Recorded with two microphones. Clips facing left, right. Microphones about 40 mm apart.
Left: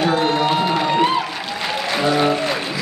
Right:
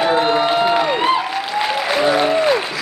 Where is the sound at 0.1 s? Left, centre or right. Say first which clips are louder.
Right 2 dB; centre.